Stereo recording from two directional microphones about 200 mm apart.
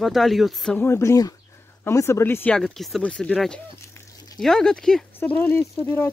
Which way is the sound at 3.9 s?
15° left (ahead or behind).